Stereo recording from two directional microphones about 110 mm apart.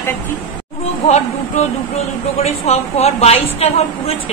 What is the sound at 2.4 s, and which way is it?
A woman's voice, 75° left (ahead or behind).